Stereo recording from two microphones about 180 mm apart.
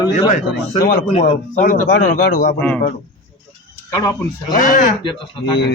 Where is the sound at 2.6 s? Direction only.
5° left (ahead or behind).